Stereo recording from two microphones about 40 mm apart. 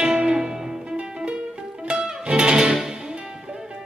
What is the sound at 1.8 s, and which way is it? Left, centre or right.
Music, right.